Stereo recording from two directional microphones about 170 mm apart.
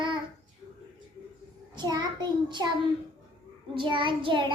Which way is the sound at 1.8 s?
25° right (ahead or behind).